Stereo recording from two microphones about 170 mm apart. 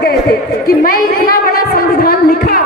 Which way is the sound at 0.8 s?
60° left (ahead or behind).